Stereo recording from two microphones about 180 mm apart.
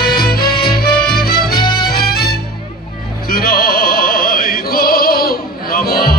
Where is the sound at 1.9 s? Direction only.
60° left (ahead or behind).